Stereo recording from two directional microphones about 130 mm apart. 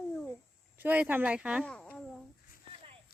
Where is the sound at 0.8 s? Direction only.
15° right (ahead or behind).